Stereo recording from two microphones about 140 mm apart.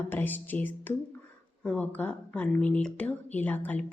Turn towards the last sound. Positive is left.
turn(degrees=15)  # may be behind; listen again after turning